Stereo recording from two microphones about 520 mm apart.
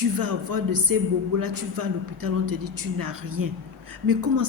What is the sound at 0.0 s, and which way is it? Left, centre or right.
A man's voice, right.